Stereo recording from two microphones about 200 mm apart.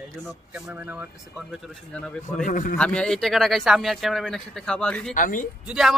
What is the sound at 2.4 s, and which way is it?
Speech, 40° left (ahead or behind).